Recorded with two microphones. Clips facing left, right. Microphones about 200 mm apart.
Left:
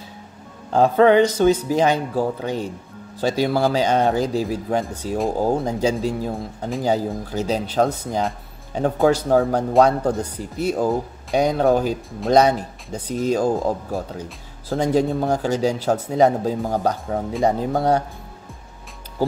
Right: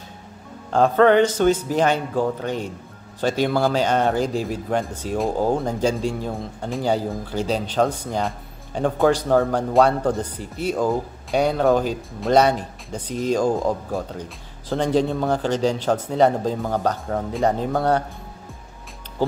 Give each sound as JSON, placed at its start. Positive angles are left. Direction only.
{"t": 0.7, "sound": "speech", "side_deg": 10}